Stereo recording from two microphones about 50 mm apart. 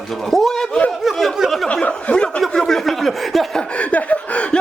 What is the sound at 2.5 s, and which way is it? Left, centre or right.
Speech, centre.